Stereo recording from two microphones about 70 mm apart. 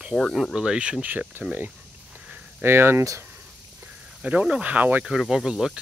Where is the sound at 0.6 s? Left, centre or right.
Centre.